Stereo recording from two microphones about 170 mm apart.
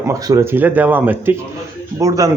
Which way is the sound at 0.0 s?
20° right (ahead or behind).